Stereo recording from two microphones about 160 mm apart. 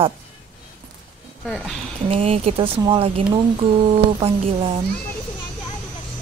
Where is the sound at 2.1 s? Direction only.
35° right (ahead or behind).